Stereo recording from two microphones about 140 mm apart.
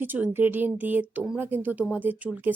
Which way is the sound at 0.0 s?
15° right (ahead or behind).